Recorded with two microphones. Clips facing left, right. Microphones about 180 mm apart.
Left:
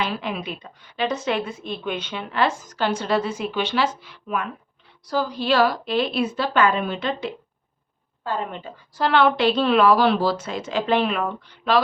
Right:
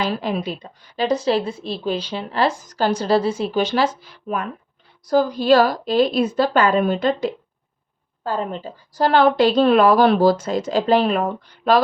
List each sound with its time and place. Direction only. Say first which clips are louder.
0.0 s a woman's voice: right 4 dB; 40° right (ahead or behind)